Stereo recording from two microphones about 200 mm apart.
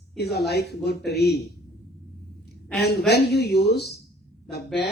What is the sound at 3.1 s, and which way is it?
Speech, 55° left (ahead or behind).